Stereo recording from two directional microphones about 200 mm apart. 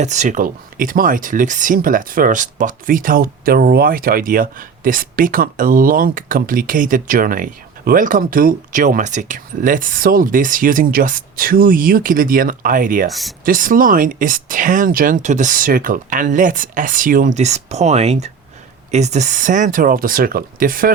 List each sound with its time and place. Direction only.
0.0 s speech: 35° right (ahead or behind)
13.1 s speech: centre (ahead or behind)
13.4 s speech: 45° right (ahead or behind)